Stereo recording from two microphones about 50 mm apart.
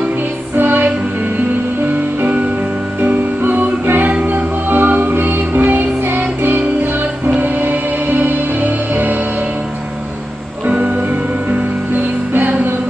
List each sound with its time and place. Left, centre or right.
0.6 s music: right
3.0 s music: right
11.9 s music: right